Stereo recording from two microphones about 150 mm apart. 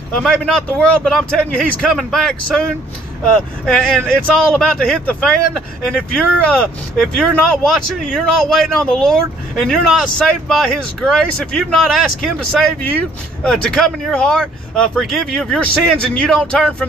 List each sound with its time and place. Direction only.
0.1 s speech: 5° left (ahead or behind)